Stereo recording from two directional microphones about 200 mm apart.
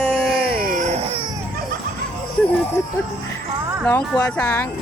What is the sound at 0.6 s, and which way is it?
Baby cry, 40° right (ahead or behind).